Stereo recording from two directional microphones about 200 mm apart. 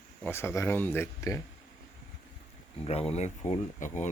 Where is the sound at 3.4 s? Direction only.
35° left (ahead or behind).